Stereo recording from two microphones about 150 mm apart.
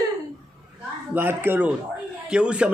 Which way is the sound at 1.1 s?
15° right (ahead or behind).